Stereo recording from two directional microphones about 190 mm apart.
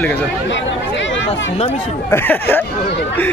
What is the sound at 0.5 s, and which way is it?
Chatter, 75° left (ahead or behind).